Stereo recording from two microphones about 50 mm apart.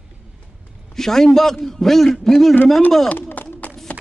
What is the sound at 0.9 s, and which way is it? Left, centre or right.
A man's voice, centre.